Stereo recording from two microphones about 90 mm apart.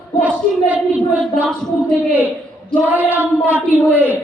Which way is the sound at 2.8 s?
20° right (ahead or behind).